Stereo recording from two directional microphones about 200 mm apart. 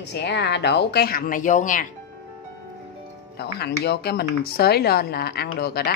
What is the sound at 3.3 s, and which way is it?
Speech, 55° left (ahead or behind).